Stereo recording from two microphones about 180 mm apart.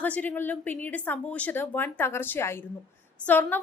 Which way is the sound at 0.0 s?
10° left (ahead or behind).